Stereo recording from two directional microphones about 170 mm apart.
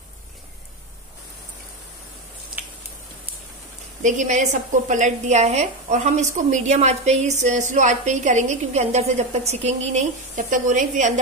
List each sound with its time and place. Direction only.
4.0 s a woman's voice: 45° right (ahead or behind)